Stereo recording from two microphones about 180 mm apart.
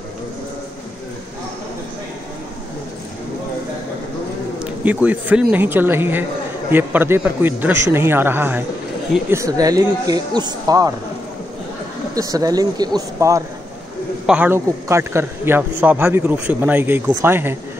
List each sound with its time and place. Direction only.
4.6 s a man's voice: 10° right (ahead or behind)
12.2 s speech: 20° right (ahead or behind)
14.2 s a man's voice: 10° right (ahead or behind)